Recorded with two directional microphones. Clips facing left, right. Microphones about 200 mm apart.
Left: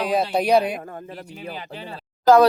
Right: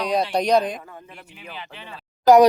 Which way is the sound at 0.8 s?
50° left (ahead or behind).